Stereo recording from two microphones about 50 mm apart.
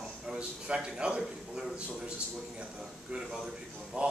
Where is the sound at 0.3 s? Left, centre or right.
Centre.